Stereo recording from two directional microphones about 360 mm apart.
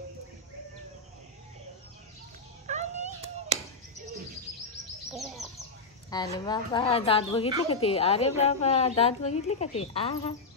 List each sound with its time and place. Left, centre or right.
2.6 s cat: centre
5.1 s bird: centre
6.0 s a woman's voice: centre